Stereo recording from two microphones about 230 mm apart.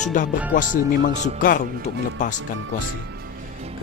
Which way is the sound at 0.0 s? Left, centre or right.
Left.